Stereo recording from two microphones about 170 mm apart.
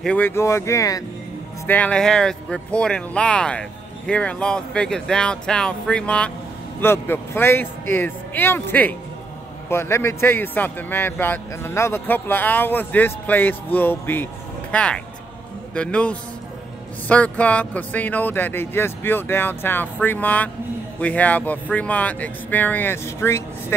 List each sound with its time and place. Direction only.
0.0 s a man's voice: 10° left (ahead or behind)
1.7 s a man's voice: 5° left (ahead or behind)